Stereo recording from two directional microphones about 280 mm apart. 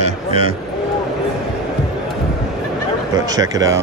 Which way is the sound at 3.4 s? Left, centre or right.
Centre.